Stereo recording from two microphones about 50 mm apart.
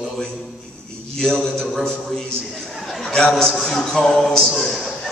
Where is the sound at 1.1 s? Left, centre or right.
Centre.